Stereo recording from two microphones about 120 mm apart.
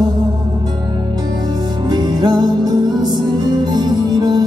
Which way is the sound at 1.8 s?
40° right (ahead or behind).